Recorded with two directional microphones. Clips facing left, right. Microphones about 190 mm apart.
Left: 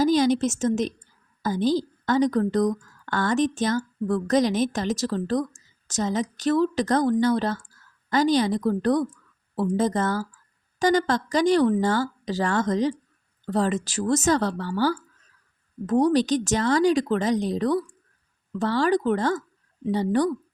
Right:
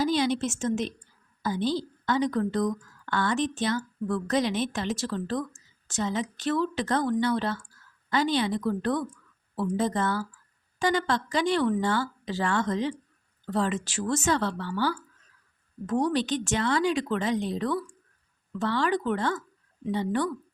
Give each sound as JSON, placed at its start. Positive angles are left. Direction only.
{"t": 0.0, "sound": "a woman's voice", "side_deg": 45}